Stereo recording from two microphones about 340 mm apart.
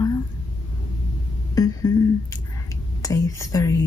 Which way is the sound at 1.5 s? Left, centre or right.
Centre.